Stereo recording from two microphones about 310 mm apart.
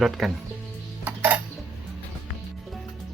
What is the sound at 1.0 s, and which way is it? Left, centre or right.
Music, centre.